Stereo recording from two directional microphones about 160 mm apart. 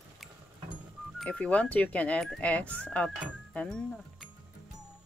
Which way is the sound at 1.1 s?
5° left (ahead or behind).